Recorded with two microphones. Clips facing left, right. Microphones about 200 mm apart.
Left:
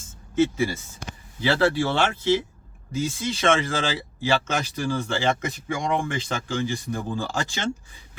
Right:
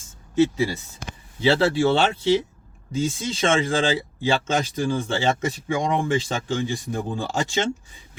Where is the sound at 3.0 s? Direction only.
25° right (ahead or behind).